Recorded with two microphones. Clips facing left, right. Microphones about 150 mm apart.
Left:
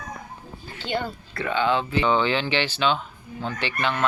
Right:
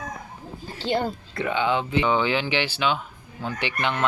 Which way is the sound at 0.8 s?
35° right (ahead or behind).